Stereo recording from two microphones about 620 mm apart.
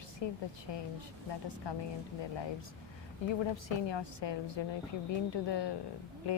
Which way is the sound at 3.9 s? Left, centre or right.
Left.